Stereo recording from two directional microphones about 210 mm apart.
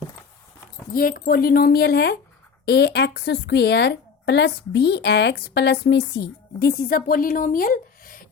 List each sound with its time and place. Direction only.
0.9 s a woman's voice: 40° left (ahead or behind)